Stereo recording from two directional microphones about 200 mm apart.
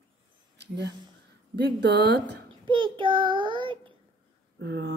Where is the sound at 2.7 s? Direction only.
25° right (ahead or behind).